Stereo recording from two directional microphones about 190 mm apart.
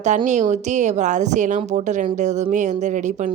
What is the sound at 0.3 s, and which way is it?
Speech, 40° right (ahead or behind).